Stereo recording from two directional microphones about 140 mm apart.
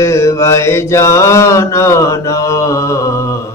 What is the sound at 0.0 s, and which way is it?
Mantra, 20° left (ahead or behind).